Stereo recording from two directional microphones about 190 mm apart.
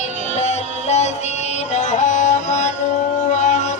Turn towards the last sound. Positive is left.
turn(degrees=40)  # may be behind; listen again after turning